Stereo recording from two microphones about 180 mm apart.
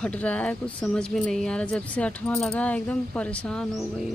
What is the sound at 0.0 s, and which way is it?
Speech, 10° left (ahead or behind).